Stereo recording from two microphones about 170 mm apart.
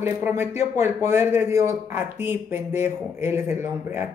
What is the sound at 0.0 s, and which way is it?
Speech, 15° right (ahead or behind).